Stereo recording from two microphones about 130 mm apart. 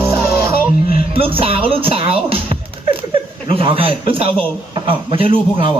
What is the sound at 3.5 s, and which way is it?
Speech, 45° right (ahead or behind).